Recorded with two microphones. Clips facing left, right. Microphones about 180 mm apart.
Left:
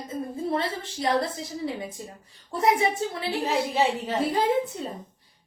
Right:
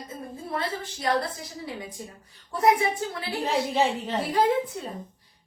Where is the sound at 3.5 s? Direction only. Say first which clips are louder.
Right 1 dB; 10° left (ahead or behind).